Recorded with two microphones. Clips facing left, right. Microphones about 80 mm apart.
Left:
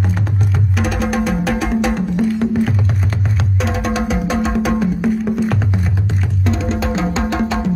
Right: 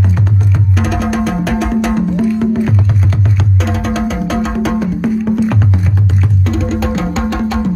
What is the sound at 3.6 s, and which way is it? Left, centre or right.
Music, centre.